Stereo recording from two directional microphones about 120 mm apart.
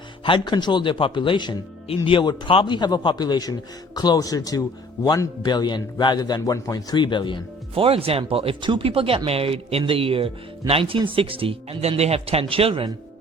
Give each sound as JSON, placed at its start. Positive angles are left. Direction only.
{"t": 0.3, "sound": "a man's voice", "side_deg": 40}
{"t": 7.8, "sound": "speech", "side_deg": -50}